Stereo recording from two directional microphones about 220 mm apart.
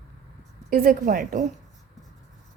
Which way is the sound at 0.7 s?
40° right (ahead or behind).